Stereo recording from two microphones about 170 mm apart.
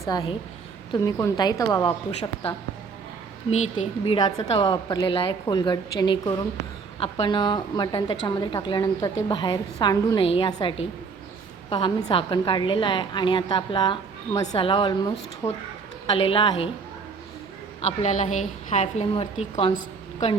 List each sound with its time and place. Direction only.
0.0 s a woman's voice: 25° left (ahead or behind)
4.0 s a woman's voice: 25° left (ahead or behind)
10.2 s a woman's voice: 30° left (ahead or behind)
15.4 s a woman's voice: 15° left (ahead or behind)
16.0 s a woman's voice: 35° left (ahead or behind)
17.7 s a woman's voice: 40° left (ahead or behind)